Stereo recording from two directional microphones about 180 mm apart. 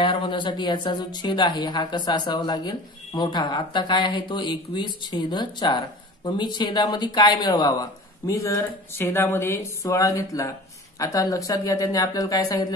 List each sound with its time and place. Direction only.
0.0 s a woman's voice: 25° left (ahead or behind)